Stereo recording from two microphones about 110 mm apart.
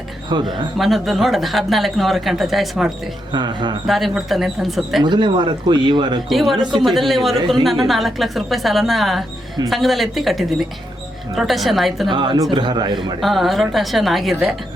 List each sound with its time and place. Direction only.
0.3 s speech: 40° right (ahead or behind)
0.8 s speech: centre (ahead or behind)
3.3 s speech: 40° right (ahead or behind)
3.8 s speech: centre (ahead or behind)
5.0 s speech: 45° right (ahead or behind)
6.2 s speech: centre (ahead or behind)
12.1 s a man's voice: 40° right (ahead or behind)
13.0 s speech: centre (ahead or behind)